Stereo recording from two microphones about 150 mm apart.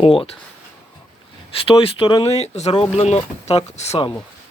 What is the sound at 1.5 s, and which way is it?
Speech, 40° left (ahead or behind).